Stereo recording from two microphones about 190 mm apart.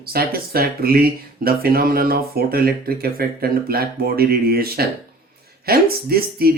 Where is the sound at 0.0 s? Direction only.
50° right (ahead or behind).